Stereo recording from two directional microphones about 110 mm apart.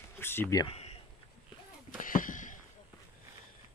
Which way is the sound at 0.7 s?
70° left (ahead or behind).